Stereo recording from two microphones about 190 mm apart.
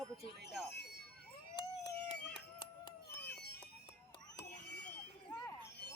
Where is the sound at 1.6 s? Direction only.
25° left (ahead or behind).